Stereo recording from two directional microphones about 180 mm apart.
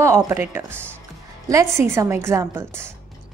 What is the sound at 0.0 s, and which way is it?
A woman's voice, 15° right (ahead or behind).